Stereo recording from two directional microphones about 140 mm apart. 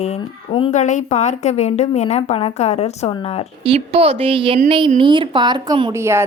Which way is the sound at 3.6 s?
45° right (ahead or behind).